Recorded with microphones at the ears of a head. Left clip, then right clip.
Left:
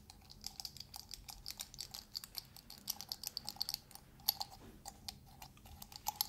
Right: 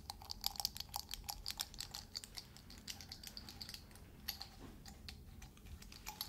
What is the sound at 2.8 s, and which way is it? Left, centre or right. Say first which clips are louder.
Typing: left 6 dB; left.